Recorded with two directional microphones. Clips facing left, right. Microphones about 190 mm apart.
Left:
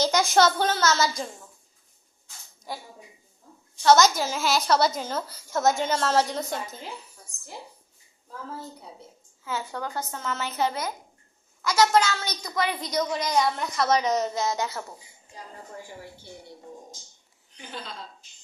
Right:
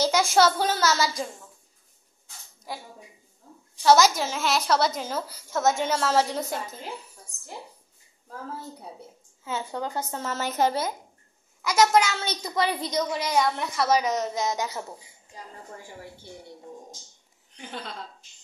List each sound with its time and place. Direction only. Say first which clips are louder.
0.0 s a woman's voice: even; 5° right (ahead or behind)
2.7 s a woman's voice: even; centre (ahead or behind)
9.4 s a child's voice: right 1 dB; 25° right (ahead or behind)
10.2 s a woman's voice: right 3 dB; 40° right (ahead or behind)
11.6 s a child's voice: right 1 dB; 20° right (ahead or behind)
13.1 s a woman's voice: even; 5° right (ahead or behind)
14.3 s a woman's voice: even; 15° right (ahead or behind)